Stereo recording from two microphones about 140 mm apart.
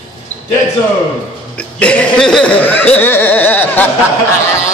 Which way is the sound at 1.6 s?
10° left (ahead or behind).